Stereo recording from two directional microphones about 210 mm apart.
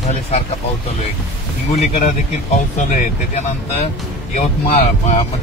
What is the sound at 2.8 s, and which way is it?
Speech, 40° left (ahead or behind).